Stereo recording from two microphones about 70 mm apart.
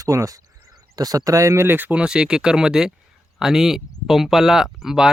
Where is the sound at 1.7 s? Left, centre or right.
Right.